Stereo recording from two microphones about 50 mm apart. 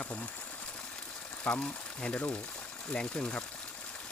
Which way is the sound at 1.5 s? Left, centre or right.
Centre.